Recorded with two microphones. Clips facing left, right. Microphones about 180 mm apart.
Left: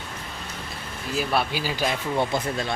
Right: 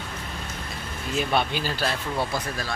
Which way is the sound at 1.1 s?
5° left (ahead or behind).